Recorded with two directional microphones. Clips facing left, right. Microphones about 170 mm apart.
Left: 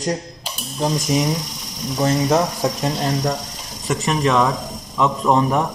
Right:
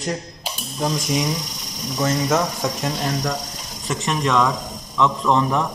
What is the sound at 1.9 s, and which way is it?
Speech, 30° left (ahead or behind).